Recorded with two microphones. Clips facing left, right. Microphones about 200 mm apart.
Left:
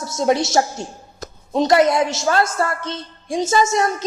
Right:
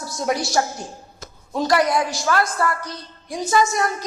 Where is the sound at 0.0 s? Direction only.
25° left (ahead or behind).